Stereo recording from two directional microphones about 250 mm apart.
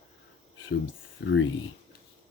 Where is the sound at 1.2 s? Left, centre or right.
Left.